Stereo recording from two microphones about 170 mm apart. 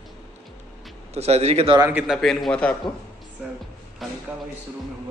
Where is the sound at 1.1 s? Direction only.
40° right (ahead or behind).